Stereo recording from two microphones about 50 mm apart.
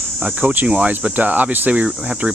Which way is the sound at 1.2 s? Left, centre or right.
Right.